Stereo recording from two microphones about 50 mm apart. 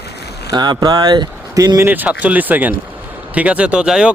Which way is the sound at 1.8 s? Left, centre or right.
Right.